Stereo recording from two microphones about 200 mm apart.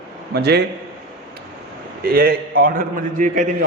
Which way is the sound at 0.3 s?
55° right (ahead or behind).